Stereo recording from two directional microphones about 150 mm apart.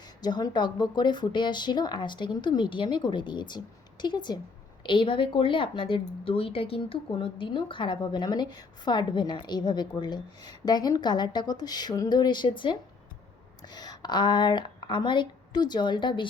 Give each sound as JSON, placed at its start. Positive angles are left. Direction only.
{"t": 0.2, "sound": "speech", "side_deg": 30}
{"t": 13.7, "sound": "a woman's voice", "side_deg": 25}